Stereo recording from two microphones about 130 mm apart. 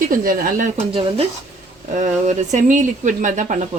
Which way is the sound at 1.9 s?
75° right (ahead or behind).